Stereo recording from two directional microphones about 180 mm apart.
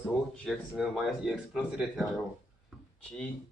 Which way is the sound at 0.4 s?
Centre (ahead or behind).